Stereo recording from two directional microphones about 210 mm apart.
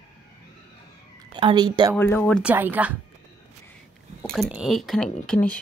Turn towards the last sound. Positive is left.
turn(degrees=5)  # may be behind; listen again after turning